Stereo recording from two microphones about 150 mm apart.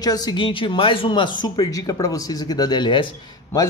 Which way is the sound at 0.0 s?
25° left (ahead or behind).